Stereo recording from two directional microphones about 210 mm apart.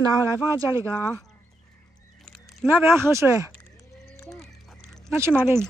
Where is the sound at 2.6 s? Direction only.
10° right (ahead or behind).